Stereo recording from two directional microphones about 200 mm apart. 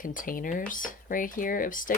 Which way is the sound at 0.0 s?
40° left (ahead or behind).